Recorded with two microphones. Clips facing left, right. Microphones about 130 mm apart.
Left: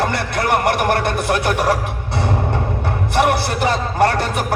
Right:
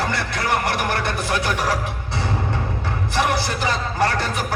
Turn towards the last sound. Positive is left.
turn(degrees=55)  # may be behind; listen again after turning